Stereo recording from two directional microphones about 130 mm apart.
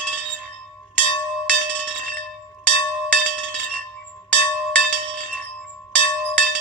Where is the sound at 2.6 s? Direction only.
10° left (ahead or behind).